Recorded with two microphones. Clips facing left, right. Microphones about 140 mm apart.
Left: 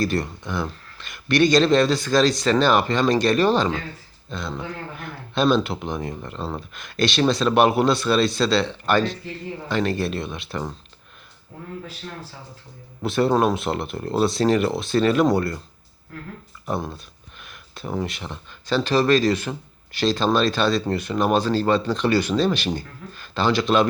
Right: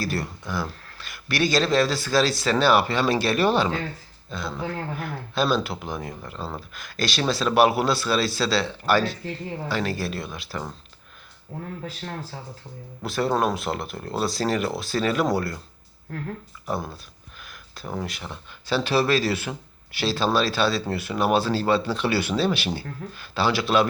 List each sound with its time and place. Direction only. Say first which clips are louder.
0.0 s speech: left 5 dB; 5° right (ahead or behind)
13.0 s speech: left 4 dB; centre (ahead or behind)
16.6 s speech: left 2 dB; centre (ahead or behind)